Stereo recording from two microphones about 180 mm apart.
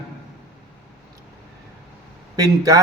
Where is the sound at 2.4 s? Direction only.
20° right (ahead or behind).